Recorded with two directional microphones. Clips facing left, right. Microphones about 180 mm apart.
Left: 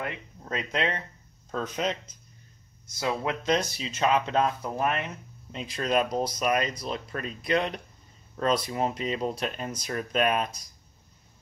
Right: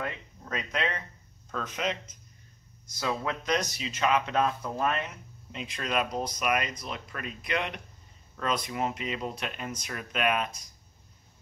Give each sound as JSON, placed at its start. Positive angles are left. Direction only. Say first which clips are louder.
{"t": 0.0, "sound": "speech", "louder": "left 1 dB", "side_deg": 30}
{"t": 3.0, "sound": "speech", "louder": "left 2 dB", "side_deg": 25}
{"t": 5.5, "sound": "speech", "louder": "left 5 dB", "side_deg": 35}